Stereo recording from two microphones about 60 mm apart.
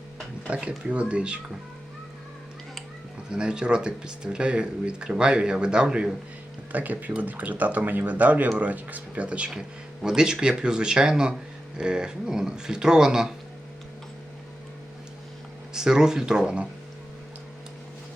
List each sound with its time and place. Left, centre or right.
0.4 s speech: centre
3.2 s speech: centre
6.7 s speech: right
9.5 s speech: centre
15.7 s speech: centre